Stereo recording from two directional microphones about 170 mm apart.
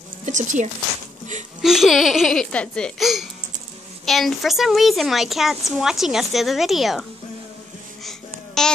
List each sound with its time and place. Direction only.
0.2 s speech: 45° right (ahead or behind)
1.6 s a woman's voice: centre (ahead or behind)
8.0 s a sound: centre (ahead or behind)